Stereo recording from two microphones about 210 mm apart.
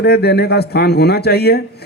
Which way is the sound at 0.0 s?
50° left (ahead or behind).